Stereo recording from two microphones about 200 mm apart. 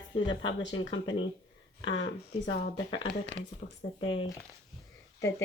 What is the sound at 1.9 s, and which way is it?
Speech, 70° left (ahead or behind).